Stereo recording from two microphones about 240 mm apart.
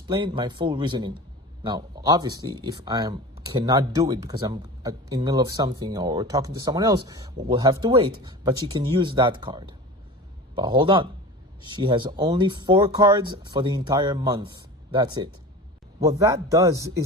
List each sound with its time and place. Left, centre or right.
0.1 s speech: centre